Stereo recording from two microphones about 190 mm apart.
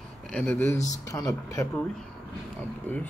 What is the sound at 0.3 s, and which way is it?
A man's voice, 10° left (ahead or behind).